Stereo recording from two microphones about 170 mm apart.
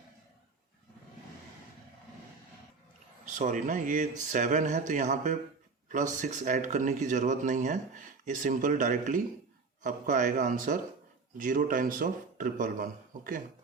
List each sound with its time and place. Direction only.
3.2 s speech: 50° right (ahead or behind)